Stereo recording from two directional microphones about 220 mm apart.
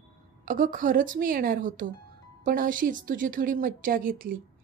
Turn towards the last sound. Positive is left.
turn(degrees=-40)  # may be behind; listen again after turning